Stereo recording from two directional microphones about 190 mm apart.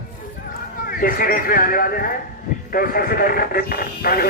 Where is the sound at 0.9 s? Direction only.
50° left (ahead or behind).